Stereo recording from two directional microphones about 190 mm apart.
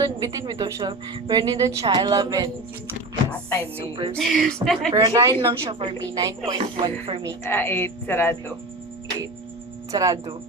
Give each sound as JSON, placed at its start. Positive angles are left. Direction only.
{"t": 0.0, "sound": "a woman's voice", "side_deg": -20}
{"t": 4.1, "sound": "a woman's voice", "side_deg": 0}
{"t": 4.9, "sound": "a woman's voice", "side_deg": -15}
{"t": 7.4, "sound": "speech", "side_deg": 10}
{"t": 9.9, "sound": "a woman's voice", "side_deg": -20}